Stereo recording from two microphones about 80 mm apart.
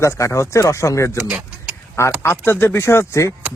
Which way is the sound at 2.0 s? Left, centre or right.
Left.